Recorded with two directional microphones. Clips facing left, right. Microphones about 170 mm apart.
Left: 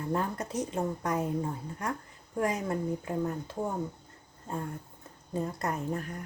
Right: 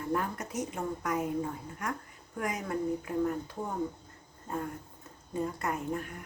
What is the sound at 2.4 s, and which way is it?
Speech, 30° left (ahead or behind).